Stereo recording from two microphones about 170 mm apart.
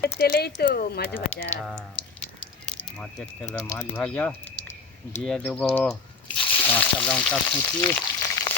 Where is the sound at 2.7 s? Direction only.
5° left (ahead or behind).